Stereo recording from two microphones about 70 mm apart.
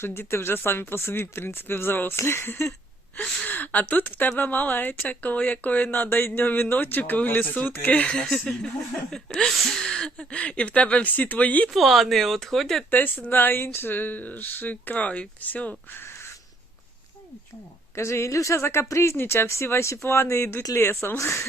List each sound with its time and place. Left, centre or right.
0.0 s speech: left
8.1 s speech: centre
11.7 s speech: centre
12.9 s speech: left
15.9 s a sound: left
17.9 s speech: left
19.1 s speech: left